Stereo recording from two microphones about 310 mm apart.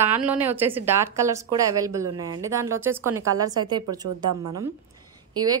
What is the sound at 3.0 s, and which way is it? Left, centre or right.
Speech, right.